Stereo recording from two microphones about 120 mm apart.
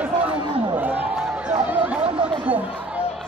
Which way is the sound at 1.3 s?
10° right (ahead or behind).